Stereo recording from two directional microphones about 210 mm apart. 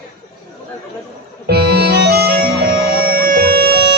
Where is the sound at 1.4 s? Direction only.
50° right (ahead or behind).